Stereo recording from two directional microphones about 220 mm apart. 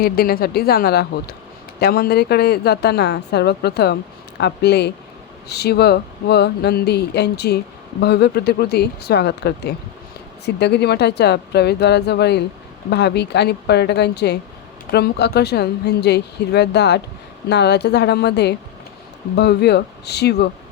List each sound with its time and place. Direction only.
0.0 s a woman's voice: 45° left (ahead or behind)